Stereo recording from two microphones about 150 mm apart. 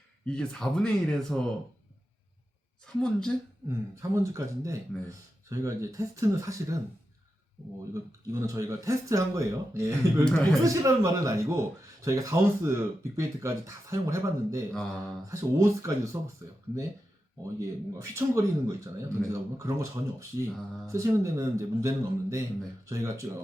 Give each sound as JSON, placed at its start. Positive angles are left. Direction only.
{"t": 0.3, "sound": "speech", "side_deg": 5}
{"t": 2.8, "sound": "speech", "side_deg": 5}
{"t": 3.7, "sound": "speech", "side_deg": -20}
{"t": 7.9, "sound": "speech", "side_deg": -20}
{"t": 10.3, "sound": "speech", "side_deg": 5}
{"t": 10.6, "sound": "speech", "side_deg": -20}
{"t": 17.4, "sound": "speech", "side_deg": -20}